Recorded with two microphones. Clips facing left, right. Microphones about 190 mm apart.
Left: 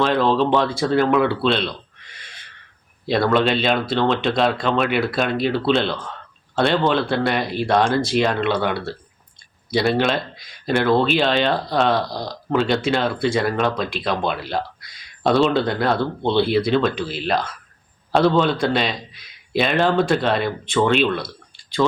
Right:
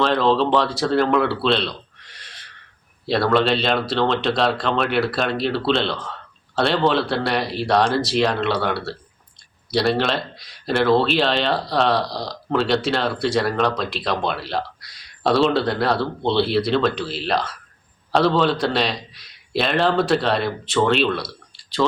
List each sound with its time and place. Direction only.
0.0 s speech: 5° left (ahead or behind)
1.4 s a sound: centre (ahead or behind)
3.1 s speech: centre (ahead or behind)
7.4 s speech: 50° left (ahead or behind)
8.1 s speech: centre (ahead or behind)
18.1 s speech: centre (ahead or behind)